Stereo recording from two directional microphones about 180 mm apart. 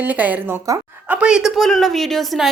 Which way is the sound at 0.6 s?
20° right (ahead or behind).